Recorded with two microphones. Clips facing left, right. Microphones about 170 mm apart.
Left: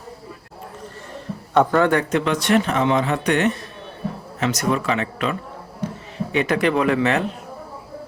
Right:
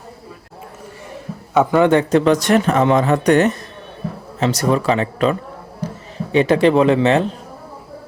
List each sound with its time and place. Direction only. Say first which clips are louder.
1.7 s speech: right 5 dB; 20° right (ahead or behind); by 3.6 s 40° right (ahead or behind)
4.4 s speech: right 5 dB; 30° right (ahead or behind)